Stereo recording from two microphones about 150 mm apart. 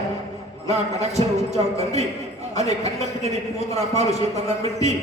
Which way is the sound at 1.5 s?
45° right (ahead or behind).